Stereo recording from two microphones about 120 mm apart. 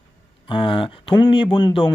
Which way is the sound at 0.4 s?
45° left (ahead or behind).